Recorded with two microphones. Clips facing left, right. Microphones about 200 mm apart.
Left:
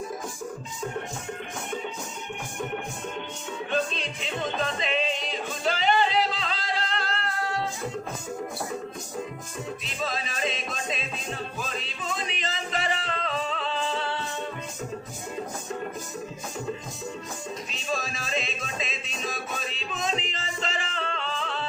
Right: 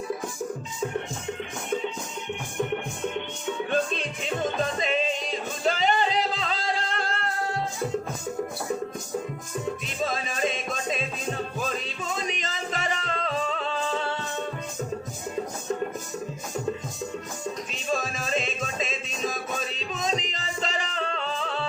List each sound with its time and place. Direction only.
3.7 s music: 50° right (ahead or behind)
9.8 s music: 50° right (ahead or behind)
17.7 s music: 50° right (ahead or behind)